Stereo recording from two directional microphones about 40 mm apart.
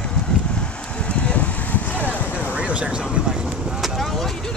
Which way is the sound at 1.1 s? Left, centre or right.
Left.